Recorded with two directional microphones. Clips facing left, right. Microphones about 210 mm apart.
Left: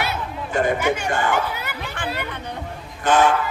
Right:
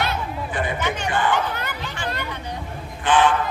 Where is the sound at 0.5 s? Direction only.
45° left (ahead or behind).